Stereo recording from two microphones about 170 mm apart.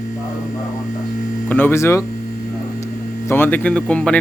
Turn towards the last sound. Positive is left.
turn(degrees=5)  # may be behind; listen again after turning